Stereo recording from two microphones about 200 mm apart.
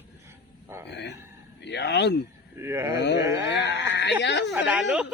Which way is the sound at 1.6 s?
60° left (ahead or behind).